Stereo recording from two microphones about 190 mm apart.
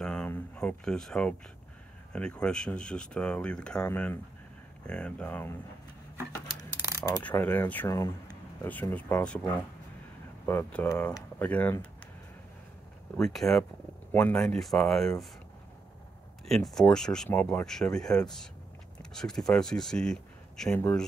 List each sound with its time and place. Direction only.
0.0 s a sound: 5° left (ahead or behind)
2.1 s speech: 5° left (ahead or behind)
7.0 s coin: 20° left (ahead or behind)
7.2 s speech: 10° left (ahead or behind)
13.2 s speech: centre (ahead or behind)
16.4 s speech: centre (ahead or behind)